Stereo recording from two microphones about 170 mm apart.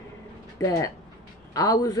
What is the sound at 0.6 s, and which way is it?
Speech, 20° left (ahead or behind).